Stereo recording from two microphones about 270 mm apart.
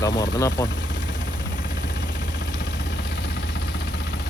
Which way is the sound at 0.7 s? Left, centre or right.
Left.